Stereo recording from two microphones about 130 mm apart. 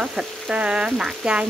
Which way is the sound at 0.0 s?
5° right (ahead or behind).